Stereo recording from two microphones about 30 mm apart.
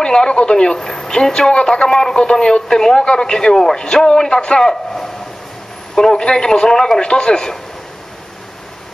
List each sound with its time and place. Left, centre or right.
0.0 s speech: left
0.7 s speech: centre